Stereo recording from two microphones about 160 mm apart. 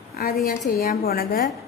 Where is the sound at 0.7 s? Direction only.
75° left (ahead or behind).